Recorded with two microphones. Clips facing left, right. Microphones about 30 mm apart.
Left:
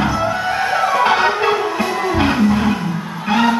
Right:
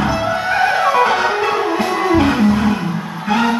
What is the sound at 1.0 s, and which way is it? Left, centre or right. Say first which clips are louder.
Music: left 1 dB; centre.